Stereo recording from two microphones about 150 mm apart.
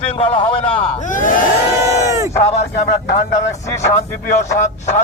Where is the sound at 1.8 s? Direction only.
20° right (ahead or behind).